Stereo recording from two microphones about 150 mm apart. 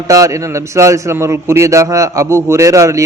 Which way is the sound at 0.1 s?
20° right (ahead or behind).